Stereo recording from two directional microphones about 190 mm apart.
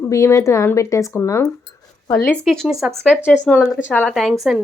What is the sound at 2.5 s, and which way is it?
Speech, centre (ahead or behind).